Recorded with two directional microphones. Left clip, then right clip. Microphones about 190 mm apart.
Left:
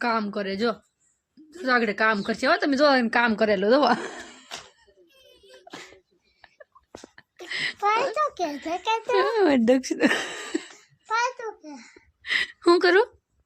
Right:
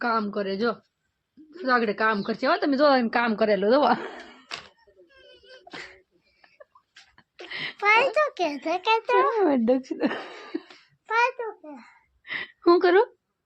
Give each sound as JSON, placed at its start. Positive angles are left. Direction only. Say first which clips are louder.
{"t": 0.0, "sound": "speech", "louder": "even", "side_deg": 10}
{"t": 5.0, "sound": "whimper", "louder": "right 3 dB", "side_deg": -5}
{"t": 6.4, "sound": "a sound", "louder": "left 2 dB", "side_deg": 5}
{"t": 7.8, "sound": "a child's voice", "louder": "right 4 dB", "side_deg": -10}
{"t": 9.1, "sound": "speech", "louder": "left 4 dB", "side_deg": 0}
{"t": 11.0, "sound": "child singing", "louder": "right 2 dB", "side_deg": -40}
{"t": 12.2, "sound": "a sound", "louder": "left 2 dB", "side_deg": 0}